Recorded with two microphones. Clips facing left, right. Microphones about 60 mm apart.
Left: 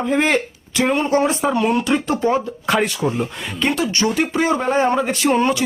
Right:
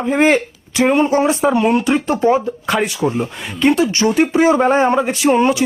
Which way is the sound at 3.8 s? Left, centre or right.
Right.